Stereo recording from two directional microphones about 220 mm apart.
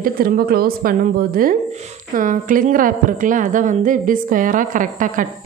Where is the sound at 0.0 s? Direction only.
40° right (ahead or behind).